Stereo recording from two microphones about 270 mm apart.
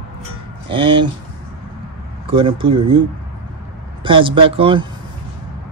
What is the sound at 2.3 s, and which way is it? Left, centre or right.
Speech, centre.